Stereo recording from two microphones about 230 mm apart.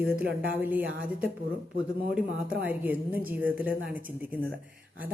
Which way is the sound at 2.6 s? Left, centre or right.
Centre.